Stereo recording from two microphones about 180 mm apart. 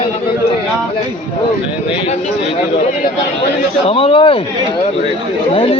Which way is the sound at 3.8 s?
30° left (ahead or behind).